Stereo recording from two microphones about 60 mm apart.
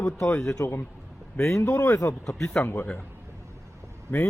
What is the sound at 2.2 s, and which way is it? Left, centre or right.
Speech, centre.